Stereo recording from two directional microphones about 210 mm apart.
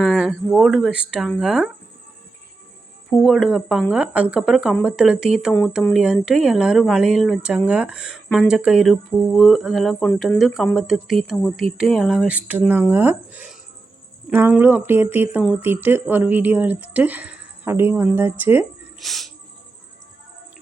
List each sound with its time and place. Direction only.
0.0 s speech: centre (ahead or behind)
3.1 s speech: centre (ahead or behind)